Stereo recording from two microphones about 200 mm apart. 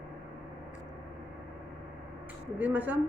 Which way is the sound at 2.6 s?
10° right (ahead or behind).